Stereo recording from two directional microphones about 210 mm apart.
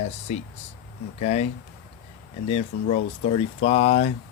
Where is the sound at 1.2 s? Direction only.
30° left (ahead or behind).